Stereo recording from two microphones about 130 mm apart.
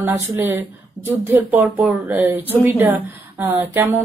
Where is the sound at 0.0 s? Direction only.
15° right (ahead or behind).